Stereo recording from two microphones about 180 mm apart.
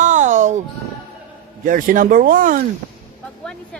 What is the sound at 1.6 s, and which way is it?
Speech, 50° right (ahead or behind).